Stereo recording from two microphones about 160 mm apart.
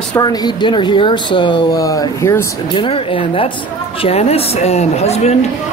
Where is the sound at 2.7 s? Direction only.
35° left (ahead or behind).